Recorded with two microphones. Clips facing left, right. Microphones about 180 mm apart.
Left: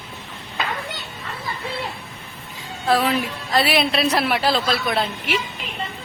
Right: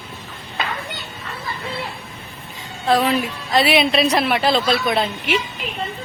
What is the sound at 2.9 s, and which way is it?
A woman's voice, centre (ahead or behind).